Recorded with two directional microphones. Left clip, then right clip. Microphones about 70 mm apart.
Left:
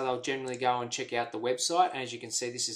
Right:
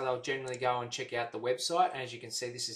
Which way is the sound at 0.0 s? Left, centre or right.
Centre.